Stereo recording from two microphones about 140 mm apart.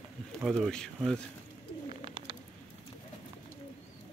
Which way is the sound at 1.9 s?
40° right (ahead or behind).